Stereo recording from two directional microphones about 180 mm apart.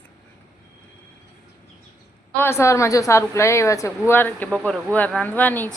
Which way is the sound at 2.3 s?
15° left (ahead or behind).